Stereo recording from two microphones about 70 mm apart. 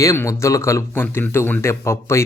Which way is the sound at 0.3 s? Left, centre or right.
Left.